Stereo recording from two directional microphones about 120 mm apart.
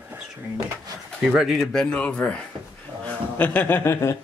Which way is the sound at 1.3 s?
5° right (ahead or behind).